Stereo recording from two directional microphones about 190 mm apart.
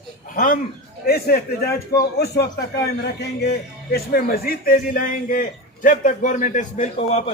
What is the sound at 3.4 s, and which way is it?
A man's voice, 55° left (ahead or behind).